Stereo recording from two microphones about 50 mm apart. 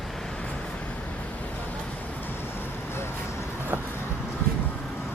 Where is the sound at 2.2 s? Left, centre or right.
Left.